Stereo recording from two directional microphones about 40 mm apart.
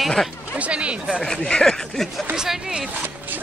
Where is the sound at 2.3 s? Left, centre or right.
Centre.